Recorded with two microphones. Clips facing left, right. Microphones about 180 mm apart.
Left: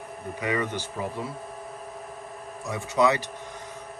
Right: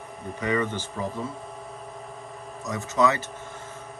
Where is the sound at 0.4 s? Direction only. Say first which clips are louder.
Right 2 dB; 10° left (ahead or behind).